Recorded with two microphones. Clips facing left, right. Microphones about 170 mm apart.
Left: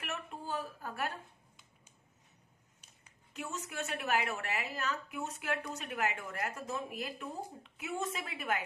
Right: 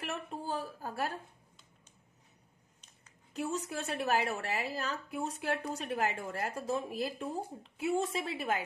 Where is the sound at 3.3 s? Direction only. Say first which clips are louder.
Right 5 dB; 35° right (ahead or behind).